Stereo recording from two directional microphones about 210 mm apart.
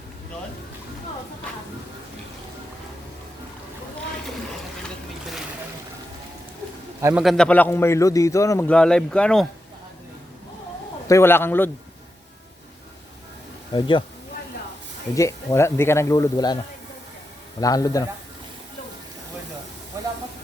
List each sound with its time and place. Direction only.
7.0 s a man's voice: 5° right (ahead or behind)
11.1 s speech: 10° left (ahead or behind)
13.7 s speech: 20° left (ahead or behind)
15.1 s speech: 15° left (ahead or behind)
17.6 s speech: 15° left (ahead or behind)
19.9 s hiss: 15° right (ahead or behind)